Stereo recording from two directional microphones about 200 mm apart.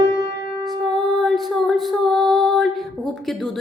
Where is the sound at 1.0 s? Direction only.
Centre (ahead or behind).